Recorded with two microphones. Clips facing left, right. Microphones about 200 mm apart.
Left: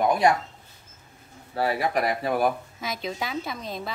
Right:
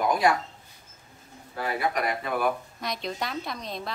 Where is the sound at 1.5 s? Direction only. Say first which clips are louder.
Left 4 dB; 35° left (ahead or behind).